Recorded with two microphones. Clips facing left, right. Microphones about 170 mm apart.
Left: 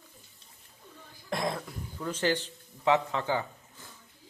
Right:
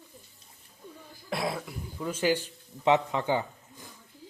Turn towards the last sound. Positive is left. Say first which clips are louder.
# right 3 dB
turn(degrees=-15)  # may be behind; listen again after turning